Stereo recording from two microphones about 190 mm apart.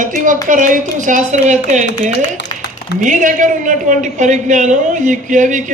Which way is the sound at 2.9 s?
40° right (ahead or behind).